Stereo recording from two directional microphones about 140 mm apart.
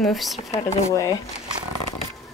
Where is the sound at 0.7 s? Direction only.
20° left (ahead or behind).